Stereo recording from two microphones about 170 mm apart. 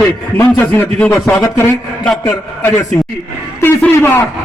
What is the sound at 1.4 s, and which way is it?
A man's voice, 20° left (ahead or behind).